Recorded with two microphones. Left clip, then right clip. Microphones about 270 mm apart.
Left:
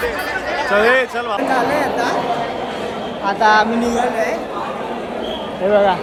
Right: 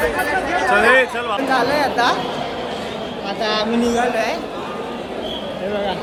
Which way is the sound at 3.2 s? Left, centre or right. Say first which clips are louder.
Left 8 dB; right.